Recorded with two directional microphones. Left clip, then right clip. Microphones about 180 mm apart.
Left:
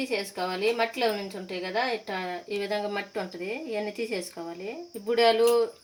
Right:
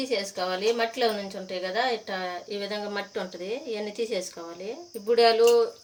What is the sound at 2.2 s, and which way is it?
Speech, 25° left (ahead or behind).